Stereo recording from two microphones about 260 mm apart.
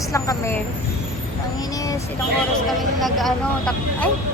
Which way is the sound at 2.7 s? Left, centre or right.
Centre.